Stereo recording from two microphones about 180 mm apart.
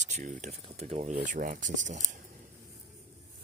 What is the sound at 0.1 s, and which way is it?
Speech, 45° right (ahead or behind).